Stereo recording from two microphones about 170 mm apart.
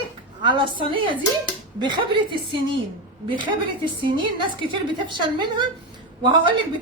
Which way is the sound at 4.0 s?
30° right (ahead or behind).